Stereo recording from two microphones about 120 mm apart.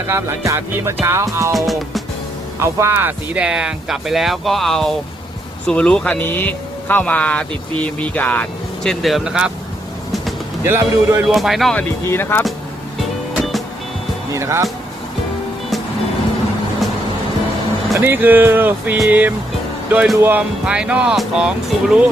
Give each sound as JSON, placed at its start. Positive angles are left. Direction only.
{"t": 0.1, "sound": "music", "side_deg": -20}
{"t": 1.5, "sound": "speech", "side_deg": 0}
{"t": 2.6, "sound": "speech", "side_deg": -20}
{"t": 10.6, "sound": "music", "side_deg": -20}
{"t": 11.3, "sound": "speech", "side_deg": 0}
{"t": 11.8, "sound": "speech", "side_deg": 20}
{"t": 13.3, "sound": "music", "side_deg": 0}
{"t": 14.3, "sound": "music", "side_deg": -25}
{"t": 17.9, "sound": "speech", "side_deg": -20}
{"t": 20.1, "sound": "music", "side_deg": -20}
{"t": 20.7, "sound": "speech", "side_deg": -10}